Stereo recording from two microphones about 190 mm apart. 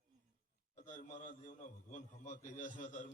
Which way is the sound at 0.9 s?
40° left (ahead or behind).